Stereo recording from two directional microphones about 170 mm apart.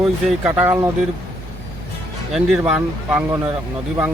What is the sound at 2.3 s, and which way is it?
Speech, 5° right (ahead or behind).